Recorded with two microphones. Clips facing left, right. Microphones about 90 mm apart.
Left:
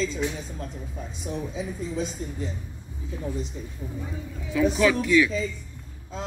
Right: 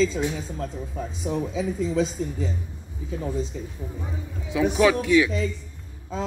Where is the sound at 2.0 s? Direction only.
90° right.